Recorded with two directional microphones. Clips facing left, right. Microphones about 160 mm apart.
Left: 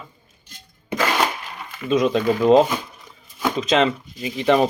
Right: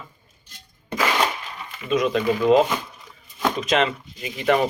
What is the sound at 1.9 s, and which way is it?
Speech, 30° left (ahead or behind).